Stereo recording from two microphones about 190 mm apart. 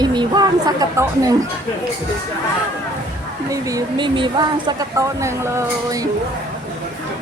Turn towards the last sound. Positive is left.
turn(degrees=-15)  # may be behind; listen again after turning